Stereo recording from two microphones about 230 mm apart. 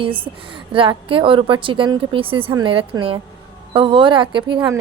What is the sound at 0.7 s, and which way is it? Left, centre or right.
Speech, right.